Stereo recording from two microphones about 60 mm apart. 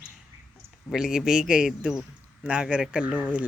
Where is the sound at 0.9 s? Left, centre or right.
Centre.